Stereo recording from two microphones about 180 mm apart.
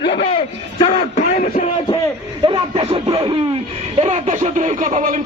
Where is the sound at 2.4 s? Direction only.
30° right (ahead or behind).